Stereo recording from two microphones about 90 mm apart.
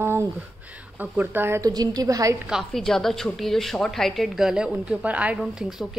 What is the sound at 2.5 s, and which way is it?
A woman's voice, 5° left (ahead or behind).